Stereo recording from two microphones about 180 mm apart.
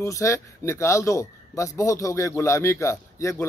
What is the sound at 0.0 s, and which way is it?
A man's voice, 15° left (ahead or behind).